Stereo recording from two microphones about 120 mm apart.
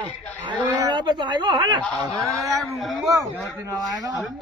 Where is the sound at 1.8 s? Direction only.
Centre (ahead or behind).